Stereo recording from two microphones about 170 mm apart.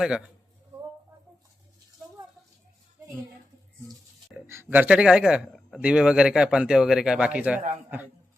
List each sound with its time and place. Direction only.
0.0 s speech: 5° right (ahead or behind)
4.4 s a man's voice: 15° right (ahead or behind)